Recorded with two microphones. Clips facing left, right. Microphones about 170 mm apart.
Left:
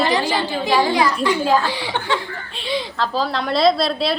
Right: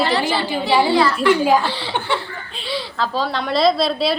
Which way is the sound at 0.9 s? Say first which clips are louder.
Right 2 dB; 15° left (ahead or behind).